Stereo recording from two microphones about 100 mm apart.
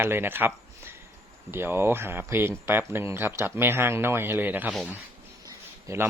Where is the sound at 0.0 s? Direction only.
20° right (ahead or behind).